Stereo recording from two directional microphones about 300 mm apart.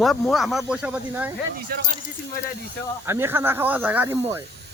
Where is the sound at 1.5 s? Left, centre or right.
Right.